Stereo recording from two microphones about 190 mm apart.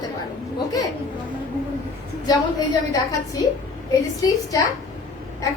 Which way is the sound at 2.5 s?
20° left (ahead or behind).